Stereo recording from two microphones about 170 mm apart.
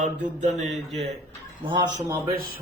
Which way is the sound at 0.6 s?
Centre (ahead or behind).